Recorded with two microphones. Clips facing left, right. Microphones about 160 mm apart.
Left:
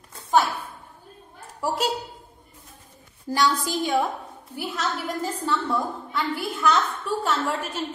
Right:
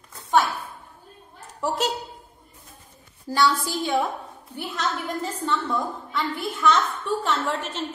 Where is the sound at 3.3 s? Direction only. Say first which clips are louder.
Right 1 dB; 15° left (ahead or behind).